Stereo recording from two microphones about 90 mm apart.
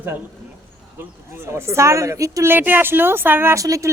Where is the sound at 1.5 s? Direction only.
30° right (ahead or behind).